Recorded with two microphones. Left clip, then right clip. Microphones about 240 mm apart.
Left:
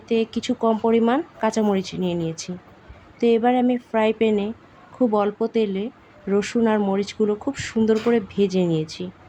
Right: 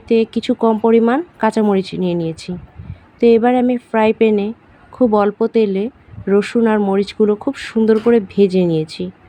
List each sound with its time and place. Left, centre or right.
0.1 s speech: centre